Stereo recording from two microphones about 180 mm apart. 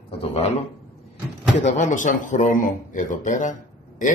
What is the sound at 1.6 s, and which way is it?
Speech, 45° left (ahead or behind).